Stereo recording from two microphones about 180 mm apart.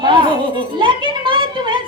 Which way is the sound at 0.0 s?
25° right (ahead or behind).